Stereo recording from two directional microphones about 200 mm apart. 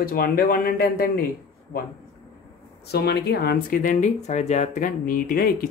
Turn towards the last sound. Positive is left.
turn(degrees=45)  # may be behind; listen again after turning